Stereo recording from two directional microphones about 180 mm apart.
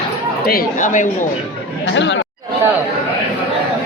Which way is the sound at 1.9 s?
90° left.